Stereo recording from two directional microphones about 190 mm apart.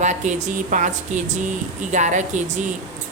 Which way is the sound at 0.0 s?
40° right (ahead or behind).